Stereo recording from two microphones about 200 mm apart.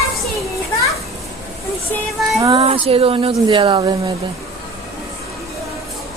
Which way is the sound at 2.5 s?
25° right (ahead or behind).